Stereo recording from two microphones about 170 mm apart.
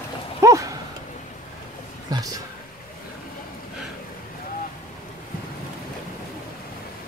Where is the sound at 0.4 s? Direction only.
20° right (ahead or behind).